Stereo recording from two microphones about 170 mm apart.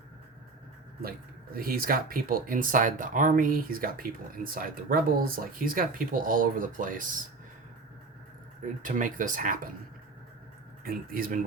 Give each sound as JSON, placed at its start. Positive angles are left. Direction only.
{"t": 1.5, "sound": "speech", "side_deg": -60}
{"t": 8.8, "sound": "speech", "side_deg": -50}
{"t": 10.8, "sound": "speech", "side_deg": -55}